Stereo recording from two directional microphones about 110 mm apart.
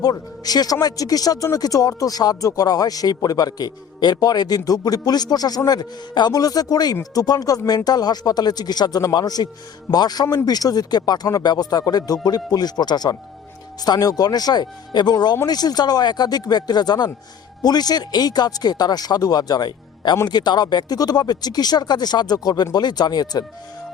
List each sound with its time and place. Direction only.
0.0 s speech: 35° left (ahead or behind)